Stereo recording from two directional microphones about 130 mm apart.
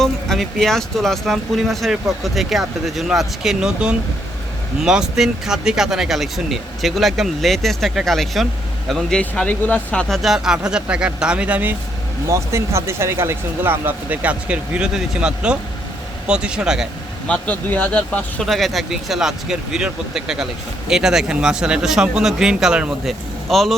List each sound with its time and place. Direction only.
0.0 s speech: 5° left (ahead or behind)
12.3 s speech: 20° right (ahead or behind); by 16.9 s 5° right (ahead or behind)
17.2 s speech: 10° left (ahead or behind)